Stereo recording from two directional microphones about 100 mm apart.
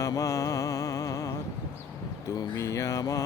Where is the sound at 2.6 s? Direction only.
30° left (ahead or behind).